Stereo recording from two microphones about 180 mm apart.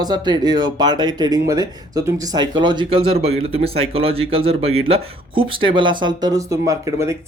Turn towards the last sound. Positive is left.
turn(degrees=-15)  # may be behind; listen again after turning